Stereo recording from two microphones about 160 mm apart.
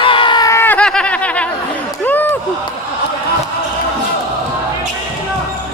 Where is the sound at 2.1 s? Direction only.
10° left (ahead or behind).